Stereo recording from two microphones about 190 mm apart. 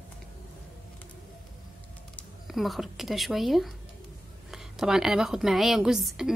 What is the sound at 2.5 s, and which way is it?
A woman's voice, centre (ahead or behind).